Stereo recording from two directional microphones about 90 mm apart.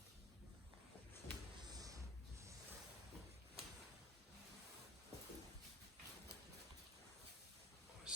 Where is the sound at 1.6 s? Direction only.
45° right (ahead or behind).